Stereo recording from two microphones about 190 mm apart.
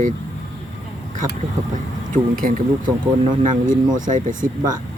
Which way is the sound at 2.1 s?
50° right (ahead or behind).